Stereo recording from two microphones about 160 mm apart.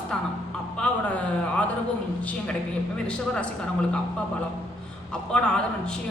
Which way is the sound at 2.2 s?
10° left (ahead or behind).